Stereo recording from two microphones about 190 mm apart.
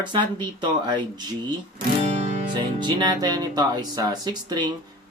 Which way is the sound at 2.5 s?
25° right (ahead or behind).